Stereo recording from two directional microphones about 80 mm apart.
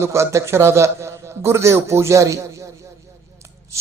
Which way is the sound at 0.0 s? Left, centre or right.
Right.